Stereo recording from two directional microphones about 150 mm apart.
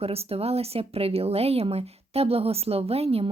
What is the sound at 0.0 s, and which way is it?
Speech, 40° right (ahead or behind).